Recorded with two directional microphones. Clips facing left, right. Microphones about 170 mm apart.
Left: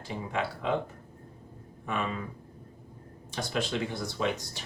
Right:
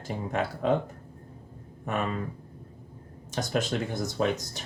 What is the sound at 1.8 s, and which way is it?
Speech, 45° right (ahead or behind).